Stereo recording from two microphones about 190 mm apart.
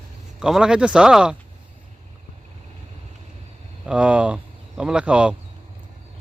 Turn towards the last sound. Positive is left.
turn(degrees=-5)  # may be behind; listen again after turning